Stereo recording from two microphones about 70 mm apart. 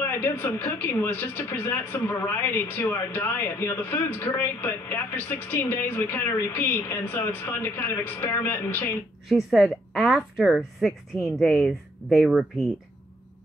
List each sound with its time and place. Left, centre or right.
0.0 s speech: left
9.3 s a woman's voice: centre